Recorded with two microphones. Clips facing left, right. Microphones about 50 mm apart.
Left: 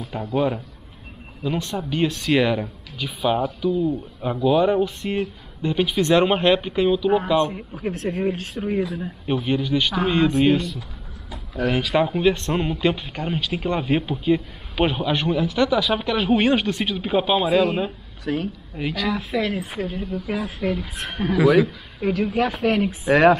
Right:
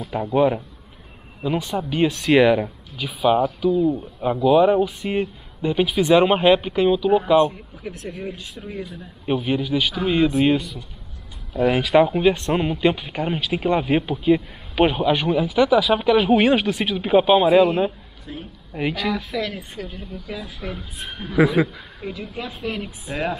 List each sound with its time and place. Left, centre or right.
0.0 s speech: centre
7.8 s speech: left
9.2 s speech: centre
18.2 s a woman's voice: left
18.8 s speech: centre
19.3 s speech: centre
19.8 s speech: left
20.8 s a woman's voice: left
22.8 s speech: left